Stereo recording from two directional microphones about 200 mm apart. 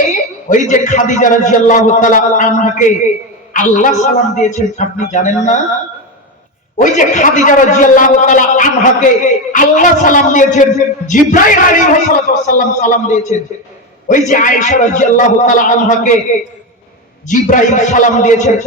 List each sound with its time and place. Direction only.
0.1 s a man's voice: 40° left (ahead or behind)
6.7 s a man's voice: 40° left (ahead or behind)
17.2 s a man's voice: 40° left (ahead or behind)